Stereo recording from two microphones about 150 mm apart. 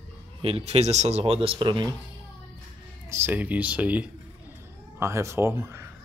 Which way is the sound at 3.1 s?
15° right (ahead or behind).